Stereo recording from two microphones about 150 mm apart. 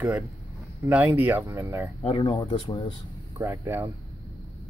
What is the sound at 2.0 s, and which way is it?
Speech, 35° left (ahead or behind).